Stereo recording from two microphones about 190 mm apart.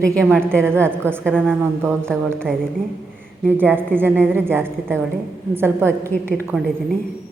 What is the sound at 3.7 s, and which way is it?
Speech, 10° right (ahead or behind).